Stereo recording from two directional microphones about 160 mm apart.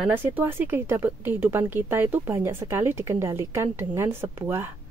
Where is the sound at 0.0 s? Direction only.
10° right (ahead or behind).